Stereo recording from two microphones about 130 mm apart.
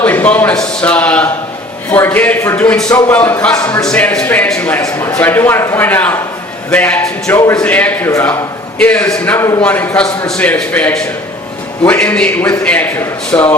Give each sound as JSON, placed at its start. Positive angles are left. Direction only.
{"t": 0.0, "sound": "a man's voice", "side_deg": 15}
{"t": 4.8, "sound": "a man's voice", "side_deg": 25}
{"t": 7.3, "sound": "a man's voice", "side_deg": 20}
{"t": 7.6, "sound": "a man's voice", "side_deg": 10}